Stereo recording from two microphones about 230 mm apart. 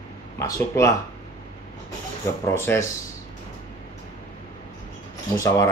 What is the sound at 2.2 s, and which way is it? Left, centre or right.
Speech, centre.